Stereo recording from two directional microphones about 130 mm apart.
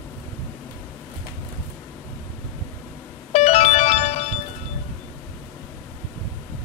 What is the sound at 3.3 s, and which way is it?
Music, 60° left (ahead or behind).